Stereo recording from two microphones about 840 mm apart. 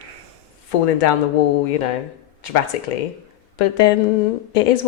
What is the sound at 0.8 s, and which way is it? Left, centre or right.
A woman's voice, left.